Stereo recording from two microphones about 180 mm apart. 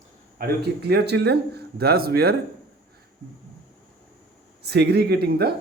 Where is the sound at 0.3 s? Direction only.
60° right (ahead or behind).